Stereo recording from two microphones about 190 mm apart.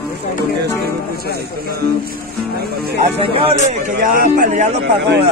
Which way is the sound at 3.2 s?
30° right (ahead or behind).